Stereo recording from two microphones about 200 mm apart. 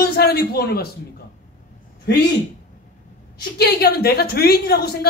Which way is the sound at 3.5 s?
55° left (ahead or behind).